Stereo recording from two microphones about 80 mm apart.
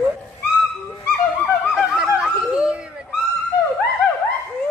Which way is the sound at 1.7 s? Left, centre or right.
Centre.